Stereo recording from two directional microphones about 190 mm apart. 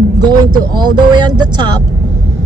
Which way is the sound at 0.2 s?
20° right (ahead or behind).